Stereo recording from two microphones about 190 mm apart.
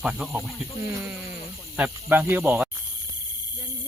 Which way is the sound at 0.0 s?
5° right (ahead or behind).